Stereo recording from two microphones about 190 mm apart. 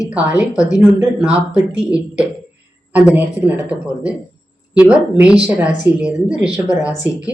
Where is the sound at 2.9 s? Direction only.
5° right (ahead or behind).